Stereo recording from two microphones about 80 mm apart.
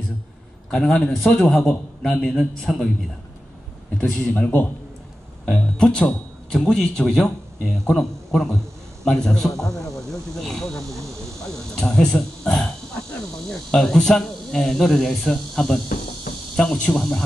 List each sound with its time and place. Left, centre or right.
0.7 s a man's voice: centre
4.3 s a man's voice: left
5.5 s a man's voice: centre